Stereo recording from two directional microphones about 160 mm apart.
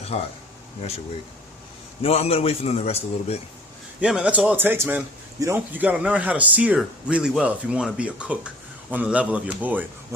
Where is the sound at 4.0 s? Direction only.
5° right (ahead or behind).